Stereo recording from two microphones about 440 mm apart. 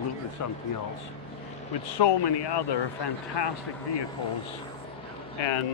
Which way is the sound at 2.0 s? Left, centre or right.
Left.